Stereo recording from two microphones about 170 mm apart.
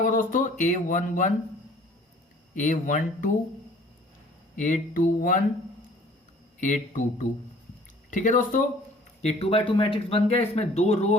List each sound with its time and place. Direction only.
0.0 s speech: 50° left (ahead or behind)
2.6 s speech: 50° left (ahead or behind)
4.5 s speech: 50° left (ahead or behind)
6.6 s speech: 50° left (ahead or behind)
9.2 s speech: 35° left (ahead or behind)